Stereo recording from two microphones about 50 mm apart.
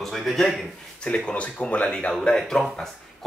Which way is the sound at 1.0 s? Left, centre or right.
Centre.